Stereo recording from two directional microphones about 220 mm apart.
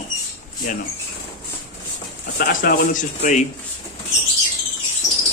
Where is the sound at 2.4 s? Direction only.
40° left (ahead or behind).